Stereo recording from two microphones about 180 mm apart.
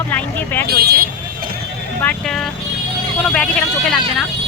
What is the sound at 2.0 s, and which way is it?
Speech, 5° left (ahead or behind).